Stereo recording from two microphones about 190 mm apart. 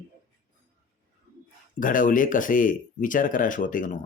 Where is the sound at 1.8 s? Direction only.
45° left (ahead or behind).